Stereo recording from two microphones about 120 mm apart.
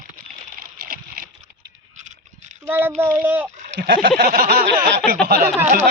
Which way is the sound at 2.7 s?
15° right (ahead or behind).